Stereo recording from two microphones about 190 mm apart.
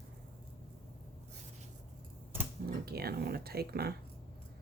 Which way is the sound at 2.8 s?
55° right (ahead or behind).